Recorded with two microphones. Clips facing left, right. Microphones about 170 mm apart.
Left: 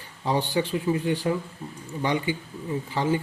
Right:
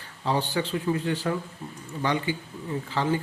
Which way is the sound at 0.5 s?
15° left (ahead or behind).